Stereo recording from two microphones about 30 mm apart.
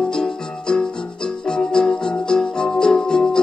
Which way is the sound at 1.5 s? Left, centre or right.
Left.